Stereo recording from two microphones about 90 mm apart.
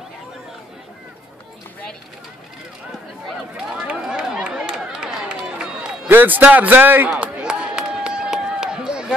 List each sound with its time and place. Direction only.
3.3 s run: 10° right (ahead or behind)
6.0 s a man's voice: 20° right (ahead or behind)
7.1 s a sound: 10° right (ahead or behind)